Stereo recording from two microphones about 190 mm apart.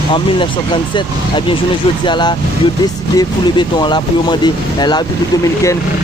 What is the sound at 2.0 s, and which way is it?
Speech, 25° left (ahead or behind).